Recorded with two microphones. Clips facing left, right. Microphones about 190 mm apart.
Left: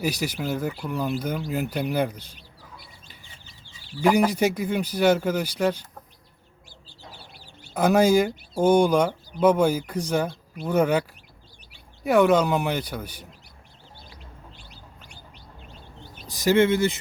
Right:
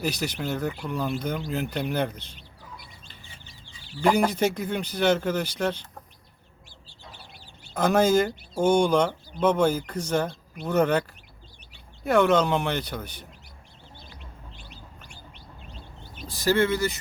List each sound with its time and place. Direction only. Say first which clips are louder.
0.0 s speech: left 2 dB; 10° left (ahead or behind)
4.0 s speech: left 2 dB; 10° left (ahead or behind)
7.7 s speech: left 2 dB; 10° left (ahead or behind)
12.0 s speech: left 2 dB; 10° left (ahead or behind)
16.3 s speech: left 3 dB; 20° left (ahead or behind)